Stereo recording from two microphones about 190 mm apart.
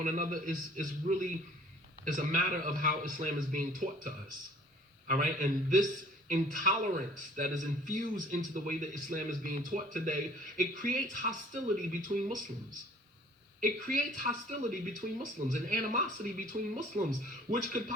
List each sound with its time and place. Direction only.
0.0 s speech: 40° right (ahead or behind)
13.6 s speech: 45° right (ahead or behind)